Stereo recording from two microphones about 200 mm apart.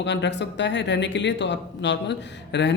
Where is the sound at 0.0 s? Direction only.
60° left (ahead or behind).